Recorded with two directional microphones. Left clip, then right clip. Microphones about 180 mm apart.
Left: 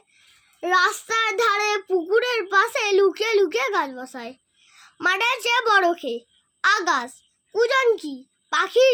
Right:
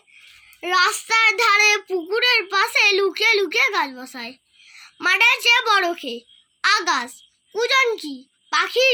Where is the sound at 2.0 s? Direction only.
50° left (ahead or behind).